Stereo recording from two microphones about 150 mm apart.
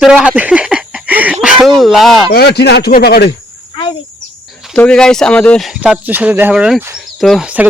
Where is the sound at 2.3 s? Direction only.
90° left.